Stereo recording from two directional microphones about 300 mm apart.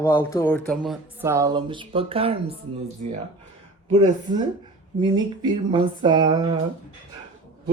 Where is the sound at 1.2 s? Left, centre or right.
Centre.